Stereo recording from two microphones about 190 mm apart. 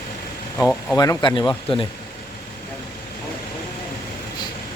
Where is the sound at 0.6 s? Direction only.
5° left (ahead or behind).